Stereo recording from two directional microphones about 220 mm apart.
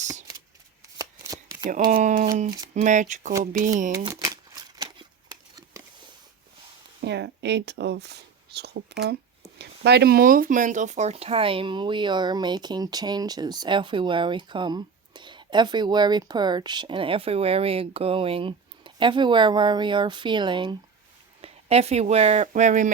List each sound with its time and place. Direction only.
0.9 s chopping: 15° right (ahead or behind)
1.9 s speech: 35° right (ahead or behind)
3.9 s shuffling cards: 15° right (ahead or behind)
7.0 s speech: 50° right (ahead or behind); by 22.9 s 35° right (ahead or behind)